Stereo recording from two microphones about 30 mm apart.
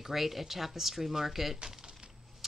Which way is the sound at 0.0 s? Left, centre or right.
Centre.